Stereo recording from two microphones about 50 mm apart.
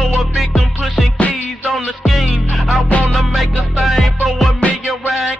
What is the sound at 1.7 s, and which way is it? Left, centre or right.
Music, centre.